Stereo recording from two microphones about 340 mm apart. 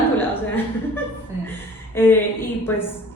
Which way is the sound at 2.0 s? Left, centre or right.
Centre.